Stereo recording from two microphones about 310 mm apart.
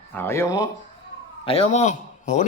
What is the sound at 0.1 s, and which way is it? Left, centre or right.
A man's voice, centre.